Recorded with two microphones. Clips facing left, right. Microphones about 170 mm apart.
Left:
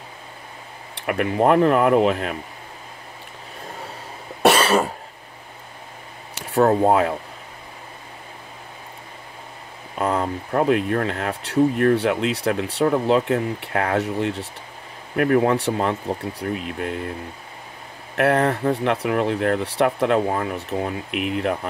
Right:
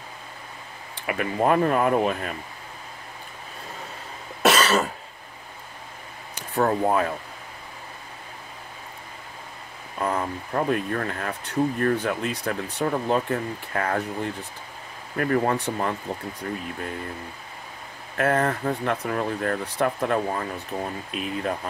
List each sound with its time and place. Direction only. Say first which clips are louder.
0.9 s speech: left 5 dB; 65° left (ahead or behind)
4.5 s cough: left 3 dB; 25° left (ahead or behind)
6.3 s a sound: left 6 dB; 75° left (ahead or behind)
6.8 s speech: left 5 dB; 75° left (ahead or behind)
9.9 s speech: left 4 dB; 75° left (ahead or behind)
15.1 s speech: left 5 dB; 65° left (ahead or behind)
18.1 s speech: left 4 dB; 70° left (ahead or behind)